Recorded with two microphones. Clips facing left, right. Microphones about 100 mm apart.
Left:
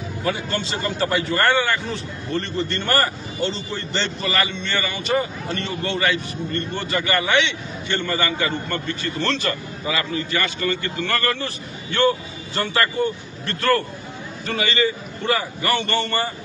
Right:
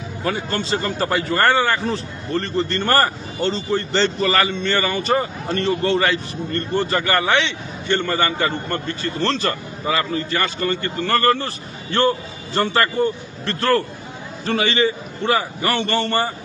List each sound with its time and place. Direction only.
0.2 s a man's voice: 40° right (ahead or behind)